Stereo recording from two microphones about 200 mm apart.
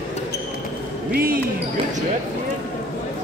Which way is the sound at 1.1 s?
45° right (ahead or behind).